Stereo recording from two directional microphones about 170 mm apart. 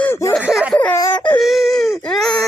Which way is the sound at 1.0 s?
10° left (ahead or behind).